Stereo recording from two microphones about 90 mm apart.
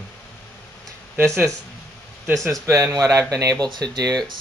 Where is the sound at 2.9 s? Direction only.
35° right (ahead or behind).